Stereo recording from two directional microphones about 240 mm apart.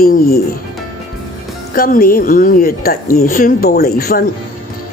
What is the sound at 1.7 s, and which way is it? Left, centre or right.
Speech, left.